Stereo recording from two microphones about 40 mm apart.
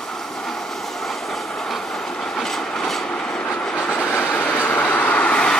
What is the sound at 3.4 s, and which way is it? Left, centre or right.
Train, left.